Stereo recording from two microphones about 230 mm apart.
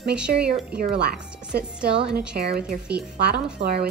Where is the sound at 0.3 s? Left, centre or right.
Right.